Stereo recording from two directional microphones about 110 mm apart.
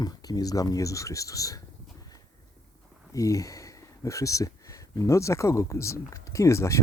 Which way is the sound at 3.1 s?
30° left (ahead or behind).